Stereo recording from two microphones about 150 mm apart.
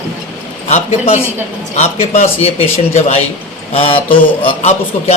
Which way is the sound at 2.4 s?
45° left (ahead or behind).